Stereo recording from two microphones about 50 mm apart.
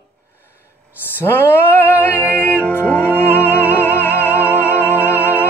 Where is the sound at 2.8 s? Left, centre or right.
Left.